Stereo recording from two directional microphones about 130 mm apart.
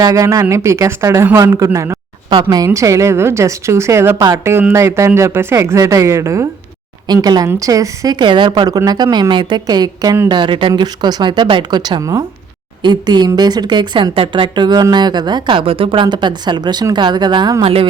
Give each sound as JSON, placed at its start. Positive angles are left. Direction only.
{"t": 0.0, "sound": "a woman's voice", "side_deg": -25}